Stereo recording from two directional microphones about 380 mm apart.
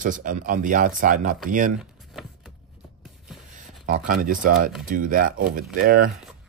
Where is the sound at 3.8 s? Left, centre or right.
Right.